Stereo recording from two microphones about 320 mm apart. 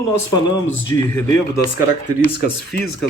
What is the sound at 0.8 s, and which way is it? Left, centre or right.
Speech, centre.